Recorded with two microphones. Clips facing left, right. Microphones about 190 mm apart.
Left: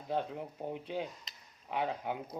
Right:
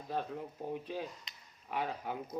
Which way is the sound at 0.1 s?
20° left (ahead or behind).